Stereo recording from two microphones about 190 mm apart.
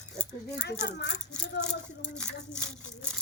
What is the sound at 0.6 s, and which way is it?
Speech, 65° left (ahead or behind).